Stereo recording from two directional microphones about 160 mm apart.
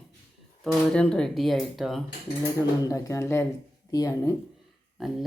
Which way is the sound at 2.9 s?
20° left (ahead or behind).